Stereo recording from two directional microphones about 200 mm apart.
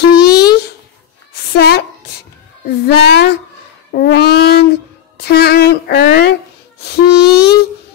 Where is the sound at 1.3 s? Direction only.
55° left (ahead or behind).